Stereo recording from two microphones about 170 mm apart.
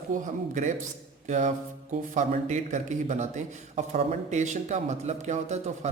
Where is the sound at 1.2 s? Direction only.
45° right (ahead or behind).